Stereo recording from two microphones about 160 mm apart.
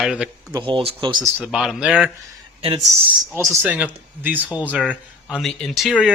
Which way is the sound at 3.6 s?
10° right (ahead or behind).